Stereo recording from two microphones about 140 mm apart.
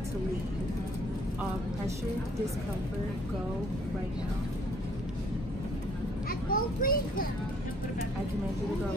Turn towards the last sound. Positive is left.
turn(degrees=90)